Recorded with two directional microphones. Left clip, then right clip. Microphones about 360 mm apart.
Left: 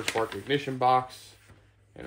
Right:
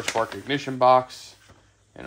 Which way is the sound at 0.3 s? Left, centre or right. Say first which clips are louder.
Right 1 dB; centre.